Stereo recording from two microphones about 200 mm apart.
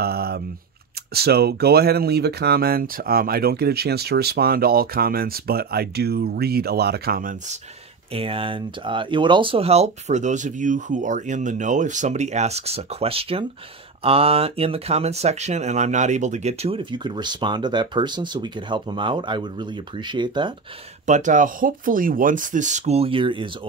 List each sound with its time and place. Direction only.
0.0 s speech: 50° right (ahead or behind)
8.1 s speech: 25° right (ahead or behind)
21.0 s speech: 40° right (ahead or behind)